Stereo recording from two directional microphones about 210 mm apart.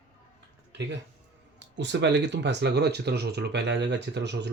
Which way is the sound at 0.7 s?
55° right (ahead or behind).